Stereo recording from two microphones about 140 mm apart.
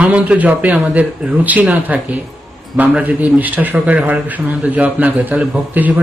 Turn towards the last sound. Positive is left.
turn(degrees=-10)  # may be behind; listen again after turning